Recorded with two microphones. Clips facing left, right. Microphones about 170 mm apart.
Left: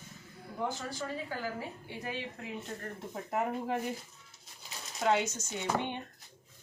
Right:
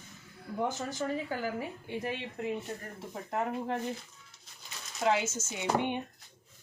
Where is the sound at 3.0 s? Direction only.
5° left (ahead or behind).